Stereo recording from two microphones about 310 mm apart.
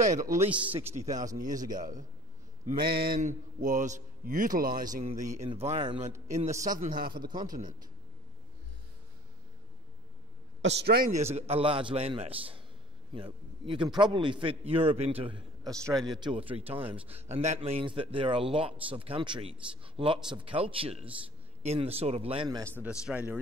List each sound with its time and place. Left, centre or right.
0.0 s a man's voice: right
0.5 s speech: centre
0.9 s a man's voice: right
7.2 s a man's voice: centre
10.6 s a man's voice: right; by 22.7 s centre
22.8 s speech: centre